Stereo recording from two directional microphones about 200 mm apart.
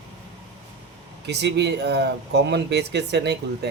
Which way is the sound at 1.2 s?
60° right (ahead or behind).